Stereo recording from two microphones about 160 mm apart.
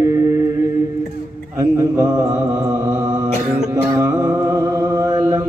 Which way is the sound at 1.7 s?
20° right (ahead or behind).